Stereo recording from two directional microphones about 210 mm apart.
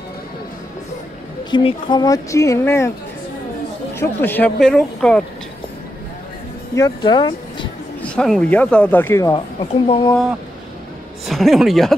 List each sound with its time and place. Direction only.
1.5 s speech: 25° left (ahead or behind)
3.9 s speech: 10° left (ahead or behind)
6.7 s speech: 20° left (ahead or behind)
8.0 s speech: 5° left (ahead or behind)
9.6 s speech: 25° left (ahead or behind)
11.2 s speech: centre (ahead or behind)